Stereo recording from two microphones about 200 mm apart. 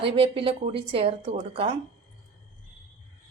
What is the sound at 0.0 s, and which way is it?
A woman's voice, 25° right (ahead or behind).